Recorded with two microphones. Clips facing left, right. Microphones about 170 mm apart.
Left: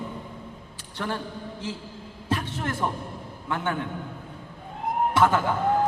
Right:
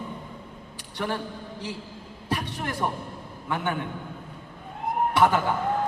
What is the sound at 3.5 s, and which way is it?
Speech, 15° right (ahead or behind).